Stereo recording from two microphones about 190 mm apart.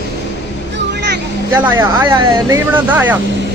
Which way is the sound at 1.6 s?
15° right (ahead or behind).